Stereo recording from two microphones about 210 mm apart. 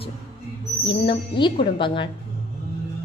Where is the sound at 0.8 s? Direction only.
25° left (ahead or behind).